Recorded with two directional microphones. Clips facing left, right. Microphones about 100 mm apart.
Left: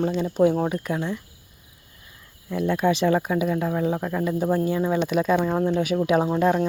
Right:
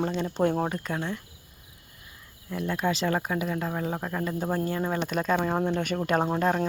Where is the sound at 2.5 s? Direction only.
20° left (ahead or behind).